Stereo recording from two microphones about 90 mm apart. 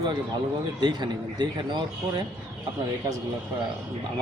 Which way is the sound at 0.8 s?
55° right (ahead or behind).